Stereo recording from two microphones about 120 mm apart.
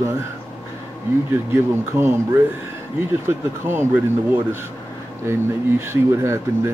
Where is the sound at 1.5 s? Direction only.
20° right (ahead or behind).